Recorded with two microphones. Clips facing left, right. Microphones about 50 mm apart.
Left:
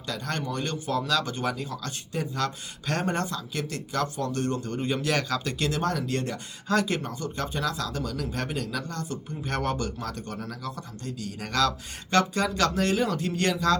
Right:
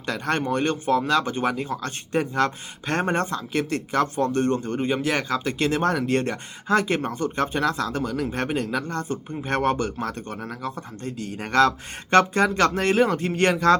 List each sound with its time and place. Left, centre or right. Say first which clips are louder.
0.0 s speech: right 7 dB; right